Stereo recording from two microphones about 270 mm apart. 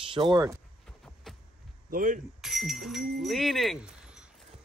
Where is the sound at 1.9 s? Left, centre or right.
Right.